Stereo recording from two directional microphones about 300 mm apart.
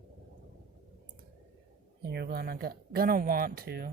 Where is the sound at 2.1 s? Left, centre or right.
Right.